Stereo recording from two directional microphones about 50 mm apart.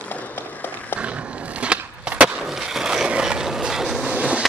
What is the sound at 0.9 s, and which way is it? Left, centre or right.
Skateboard, right.